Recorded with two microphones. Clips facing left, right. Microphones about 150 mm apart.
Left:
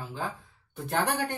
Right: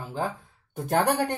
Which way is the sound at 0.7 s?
45° right (ahead or behind).